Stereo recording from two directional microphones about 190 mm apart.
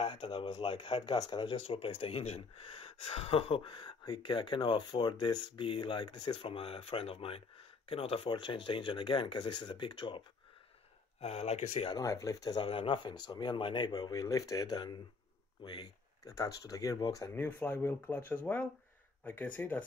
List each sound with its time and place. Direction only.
0.0 s speech: 25° left (ahead or behind)
11.9 s speech: 15° left (ahead or behind)